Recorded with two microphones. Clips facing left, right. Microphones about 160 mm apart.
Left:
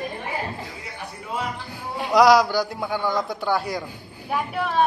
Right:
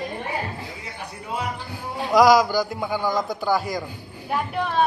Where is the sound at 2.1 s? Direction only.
Centre (ahead or behind).